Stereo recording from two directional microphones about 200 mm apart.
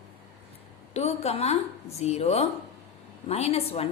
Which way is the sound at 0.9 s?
30° left (ahead or behind).